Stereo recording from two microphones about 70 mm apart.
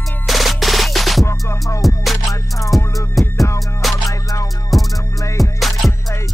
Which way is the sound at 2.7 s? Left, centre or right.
Centre.